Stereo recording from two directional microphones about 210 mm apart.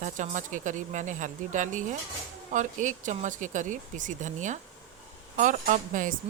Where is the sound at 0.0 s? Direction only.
35° right (ahead or behind).